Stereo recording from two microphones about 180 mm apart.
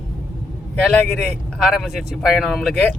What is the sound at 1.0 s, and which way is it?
Speech, 5° left (ahead or behind).